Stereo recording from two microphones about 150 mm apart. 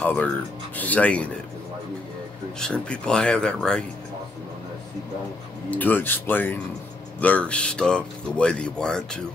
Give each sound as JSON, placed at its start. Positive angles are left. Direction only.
{"t": 0.0, "sound": "speech", "side_deg": 10}
{"t": 2.6, "sound": "speech", "side_deg": 5}
{"t": 5.7, "sound": "speech", "side_deg": 10}